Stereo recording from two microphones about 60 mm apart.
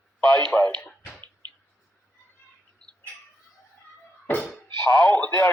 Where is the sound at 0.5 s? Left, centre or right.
Left.